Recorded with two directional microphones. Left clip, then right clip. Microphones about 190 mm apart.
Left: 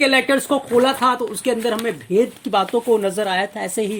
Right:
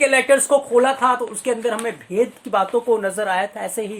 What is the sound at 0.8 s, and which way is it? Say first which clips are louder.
Speech: left 3 dB; 55° left (ahead or behind).